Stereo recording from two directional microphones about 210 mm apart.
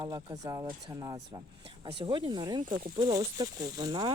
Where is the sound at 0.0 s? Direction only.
20° right (ahead or behind).